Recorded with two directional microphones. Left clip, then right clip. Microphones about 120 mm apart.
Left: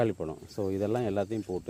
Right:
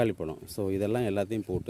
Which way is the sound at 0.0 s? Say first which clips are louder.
Right 1 dB; 30° right (ahead or behind).